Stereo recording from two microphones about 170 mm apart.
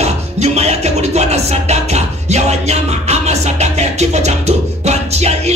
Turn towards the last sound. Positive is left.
turn(degrees=-40)  # may be behind; listen again after turning